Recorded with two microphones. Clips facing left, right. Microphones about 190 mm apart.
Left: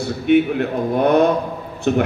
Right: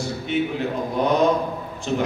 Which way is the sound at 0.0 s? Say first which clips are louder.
Left 8 dB; 60° left (ahead or behind).